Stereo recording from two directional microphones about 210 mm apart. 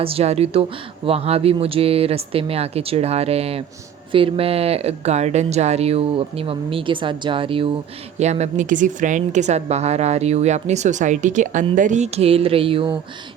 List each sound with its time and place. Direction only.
0.0 s a woman's voice: 30° right (ahead or behind)